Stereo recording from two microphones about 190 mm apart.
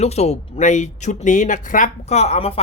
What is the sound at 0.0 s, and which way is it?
Speech, 35° left (ahead or behind).